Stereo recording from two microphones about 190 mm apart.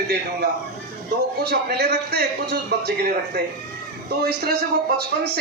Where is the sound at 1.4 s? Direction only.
55° right (ahead or behind).